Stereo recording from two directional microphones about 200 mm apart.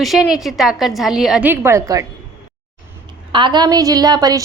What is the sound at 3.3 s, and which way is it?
A woman's voice, 25° right (ahead or behind).